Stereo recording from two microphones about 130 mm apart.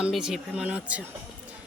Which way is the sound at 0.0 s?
5° right (ahead or behind).